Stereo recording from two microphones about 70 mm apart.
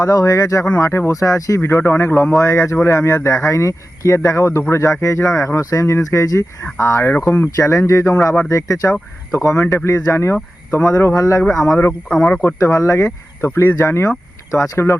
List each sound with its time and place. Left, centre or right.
0.0 s speech: left
0.8 s speech: left
1.1 s speech: left
1.6 s speech: left
2.3 s speech: left
6.7 s speech: left
7.5 s speech: left
12.0 s speech: centre
12.3 s speech: left
12.5 s speech: left